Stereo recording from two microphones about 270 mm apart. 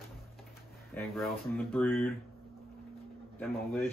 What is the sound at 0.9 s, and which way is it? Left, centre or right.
Speech, centre.